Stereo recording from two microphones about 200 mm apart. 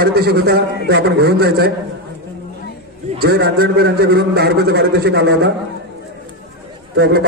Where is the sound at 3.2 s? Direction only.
50° right (ahead or behind).